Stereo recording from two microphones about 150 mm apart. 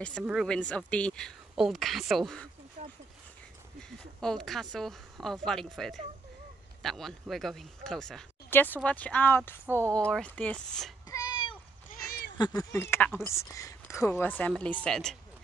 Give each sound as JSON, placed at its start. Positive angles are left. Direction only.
{"t": 0.2, "sound": "speech", "side_deg": -5}
{"t": 0.5, "sound": "a woman's voice", "side_deg": 5}
{"t": 4.2, "sound": "speech", "side_deg": 5}
{"t": 8.5, "sound": "a woman's voice", "side_deg": 15}
{"t": 9.7, "sound": "speech", "side_deg": -15}
{"t": 9.9, "sound": "a woman's voice", "side_deg": 5}
{"t": 11.1, "sound": "a sound", "side_deg": 25}
{"t": 12.4, "sound": "a woman's voice", "side_deg": 25}